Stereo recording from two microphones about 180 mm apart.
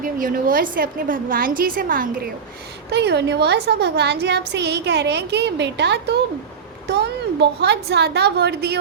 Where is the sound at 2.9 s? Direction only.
70° right (ahead or behind).